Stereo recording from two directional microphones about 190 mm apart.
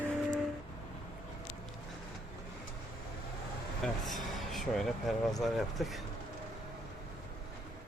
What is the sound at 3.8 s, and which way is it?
Vehicle, centre (ahead or behind).